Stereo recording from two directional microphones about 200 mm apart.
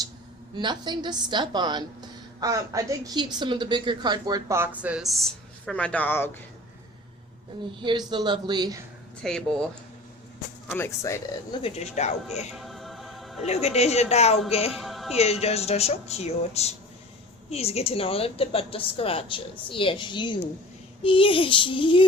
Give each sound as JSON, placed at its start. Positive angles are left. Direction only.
{"t": 0.5, "sound": "a woman's voice", "side_deg": -20}
{"t": 7.8, "sound": "a woman's voice", "side_deg": -25}
{"t": 9.2, "sound": "speech", "side_deg": 0}
{"t": 10.7, "sound": "speech", "side_deg": 10}
{"t": 11.6, "sound": "speech", "side_deg": 35}
{"t": 12.5, "sound": "music", "side_deg": 0}
{"t": 13.4, "sound": "speech", "side_deg": 30}
{"t": 14.7, "sound": "music", "side_deg": 0}
{"t": 15.1, "sound": "speech", "side_deg": 30}